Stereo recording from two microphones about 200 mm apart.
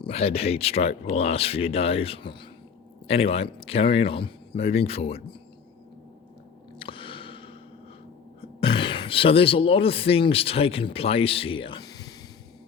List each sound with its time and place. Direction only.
0.0 s speech: 30° left (ahead or behind)
6.7 s a sound: 25° left (ahead or behind)
8.4 s speech: 25° left (ahead or behind)